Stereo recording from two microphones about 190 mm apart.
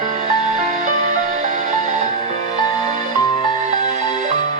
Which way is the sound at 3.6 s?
40° right (ahead or behind).